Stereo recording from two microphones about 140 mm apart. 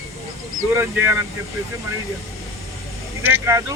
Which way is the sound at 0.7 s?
20° right (ahead or behind).